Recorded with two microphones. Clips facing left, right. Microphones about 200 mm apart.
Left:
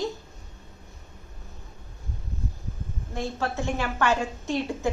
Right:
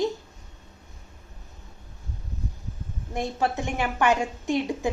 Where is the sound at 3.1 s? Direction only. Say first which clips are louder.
Right 3 dB; 15° right (ahead or behind).